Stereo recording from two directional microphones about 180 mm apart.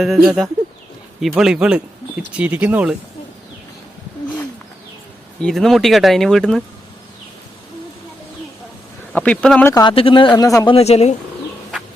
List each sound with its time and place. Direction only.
0.0 s speech: centre (ahead or behind)
5.4 s speech: centre (ahead or behind)
9.1 s speech: 5° left (ahead or behind)
9.7 s speech: 30° left (ahead or behind)
10.8 s speech: 35° left (ahead or behind)